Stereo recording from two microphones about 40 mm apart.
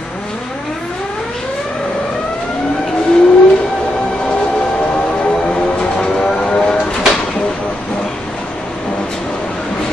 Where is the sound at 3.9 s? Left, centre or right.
Left.